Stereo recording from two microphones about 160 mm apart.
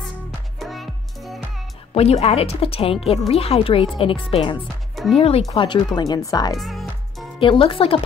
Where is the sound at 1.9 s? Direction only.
40° left (ahead or behind); by 6.5 s 20° left (ahead or behind).